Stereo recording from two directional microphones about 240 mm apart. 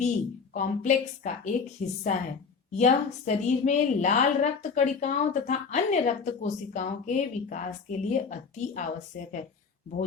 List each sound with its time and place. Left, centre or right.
0.0 s a woman's voice: left